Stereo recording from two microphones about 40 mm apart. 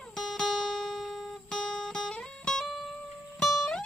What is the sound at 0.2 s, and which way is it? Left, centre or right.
Music, centre.